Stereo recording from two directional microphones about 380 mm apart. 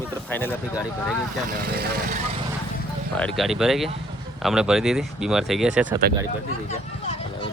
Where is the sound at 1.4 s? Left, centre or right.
Right.